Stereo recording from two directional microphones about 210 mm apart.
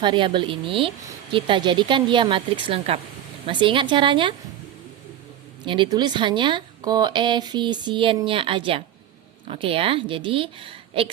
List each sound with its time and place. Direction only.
0.0 s speech: 25° right (ahead or behind)
5.6 s speech: 25° right (ahead or behind)